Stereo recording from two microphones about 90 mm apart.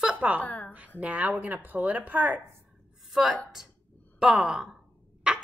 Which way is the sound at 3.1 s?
Centre (ahead or behind).